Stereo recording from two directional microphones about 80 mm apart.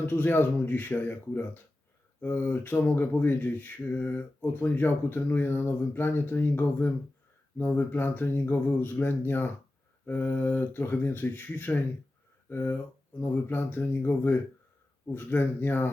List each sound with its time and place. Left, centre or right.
0.0 s speech: left